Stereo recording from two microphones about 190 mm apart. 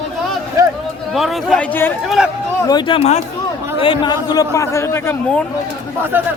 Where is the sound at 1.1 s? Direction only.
Centre (ahead or behind).